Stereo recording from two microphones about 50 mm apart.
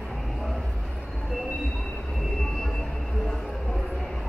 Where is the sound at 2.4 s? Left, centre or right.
Centre.